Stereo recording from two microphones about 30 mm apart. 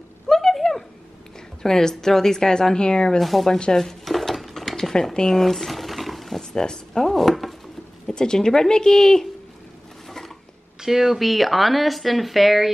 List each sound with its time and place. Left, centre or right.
0.3 s a sound: centre
1.6 s speech: centre
3.2 s speech: centre
3.7 s speech: left
4.0 s mechanisms: centre
4.9 s speech: left
5.3 s a sound: centre
6.5 s a sound: left
7.2 s chopping: centre
8.1 s speech: left
10.0 s a sound: centre
10.8 s speech: centre